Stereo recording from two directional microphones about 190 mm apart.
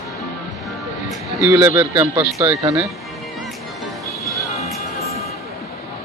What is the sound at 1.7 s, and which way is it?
Speech, 15° right (ahead or behind).